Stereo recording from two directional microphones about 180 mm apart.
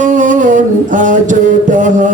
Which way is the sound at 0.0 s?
45° right (ahead or behind).